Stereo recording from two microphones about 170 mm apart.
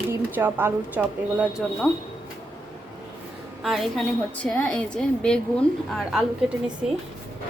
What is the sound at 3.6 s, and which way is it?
A woman's voice, centre (ahead or behind).